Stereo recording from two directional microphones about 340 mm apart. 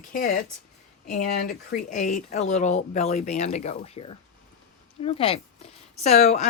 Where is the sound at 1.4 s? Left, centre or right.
Left.